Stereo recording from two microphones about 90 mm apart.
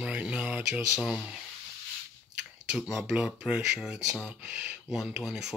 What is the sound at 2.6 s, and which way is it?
Speech, 10° right (ahead or behind).